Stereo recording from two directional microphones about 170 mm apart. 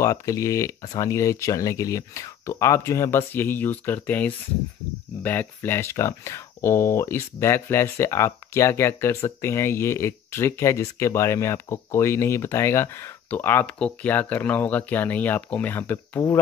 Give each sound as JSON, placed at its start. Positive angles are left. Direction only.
{"t": 0.0, "sound": "speech", "side_deg": 20}